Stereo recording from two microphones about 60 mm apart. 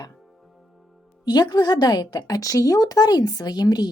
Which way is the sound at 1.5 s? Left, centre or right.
Left.